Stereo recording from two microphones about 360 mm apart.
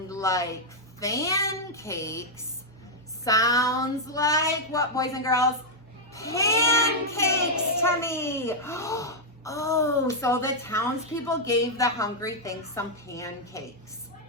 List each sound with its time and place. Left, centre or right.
0.1 s a child's voice: centre
3.2 s a child's voice: centre